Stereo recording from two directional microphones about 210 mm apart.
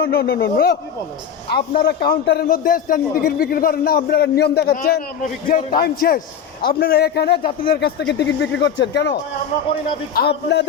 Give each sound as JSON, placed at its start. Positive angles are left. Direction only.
{"t": 0.0, "sound": "a man's voice", "side_deg": 45}
{"t": 1.8, "sound": "a man's voice", "side_deg": 45}
{"t": 10.2, "sound": "a man's voice", "side_deg": 55}